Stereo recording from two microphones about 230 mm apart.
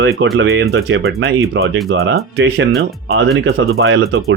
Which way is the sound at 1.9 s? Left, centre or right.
Right.